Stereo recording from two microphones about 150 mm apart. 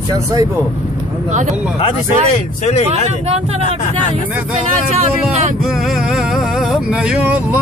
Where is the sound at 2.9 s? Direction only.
45° right (ahead or behind).